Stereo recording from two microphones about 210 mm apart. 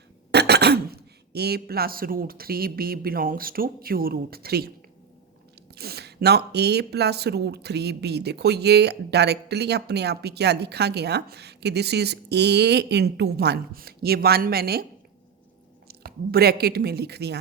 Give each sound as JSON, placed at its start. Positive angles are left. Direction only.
{"t": 0.3, "sound": "speech", "side_deg": -50}
{"t": 5.7, "sound": "speech", "side_deg": -50}
{"t": 15.9, "sound": "speech", "side_deg": -45}